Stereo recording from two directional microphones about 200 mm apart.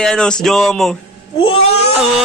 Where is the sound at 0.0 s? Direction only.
5° left (ahead or behind).